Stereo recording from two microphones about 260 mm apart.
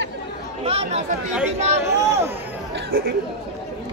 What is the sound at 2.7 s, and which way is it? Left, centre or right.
Chatter, right.